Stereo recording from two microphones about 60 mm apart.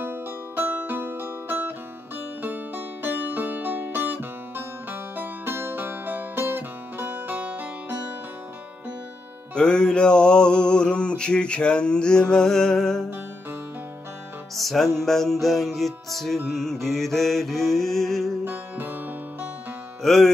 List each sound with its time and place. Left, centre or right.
0.0 s music: right
9.6 s mantra: centre
14.5 s music: centre
15.0 s mantra: centre
18.4 s music: right
20.0 s music: centre